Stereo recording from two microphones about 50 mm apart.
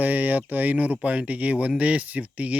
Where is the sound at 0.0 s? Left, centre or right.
Right.